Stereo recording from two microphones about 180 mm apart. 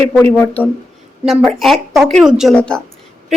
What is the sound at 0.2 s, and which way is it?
Speech, 10° left (ahead or behind).